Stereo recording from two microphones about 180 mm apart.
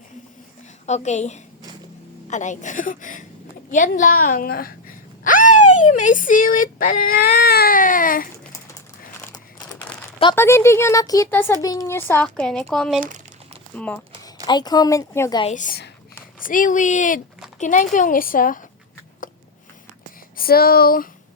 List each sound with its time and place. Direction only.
0.9 s a woman's voice: 40° left (ahead or behind)
10.3 s speech: 15° left (ahead or behind)
13.0 s crumpling: 45° right (ahead or behind)
13.7 s speech: 5° left (ahead or behind)
14.4 s speech: 25° left (ahead or behind)
15.5 s speech: 45° left (ahead or behind)
20.3 s speech: 55° left (ahead or behind)